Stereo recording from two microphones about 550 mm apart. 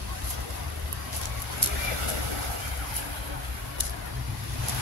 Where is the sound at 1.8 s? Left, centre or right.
Right.